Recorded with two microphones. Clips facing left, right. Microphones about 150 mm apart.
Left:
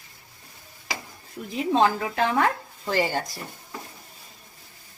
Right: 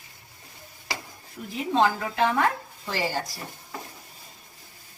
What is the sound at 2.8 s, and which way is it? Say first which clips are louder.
Speech: left 4 dB; 55° left (ahead or behind).